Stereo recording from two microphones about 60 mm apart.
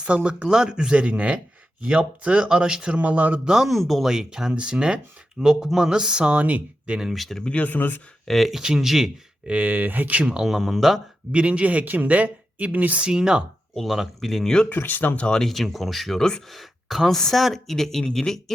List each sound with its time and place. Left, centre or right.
0.0 s speech: centre
3.0 s speech: right
3.4 s speech: centre
7.1 s speech: centre
7.5 s speech: left
8.3 s speech: centre
9.5 s speech: right
10.2 s speech: centre
11.3 s speech: centre
13.7 s speech: centre
14.7 s speech: left
15.3 s speech: centre